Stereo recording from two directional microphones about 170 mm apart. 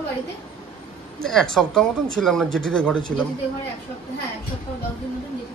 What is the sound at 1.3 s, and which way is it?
Speech, centre (ahead or behind).